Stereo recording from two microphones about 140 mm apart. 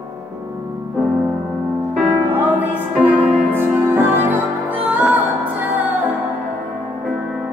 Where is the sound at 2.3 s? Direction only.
15° right (ahead or behind).